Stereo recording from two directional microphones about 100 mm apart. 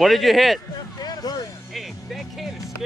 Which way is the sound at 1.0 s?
40° left (ahead or behind).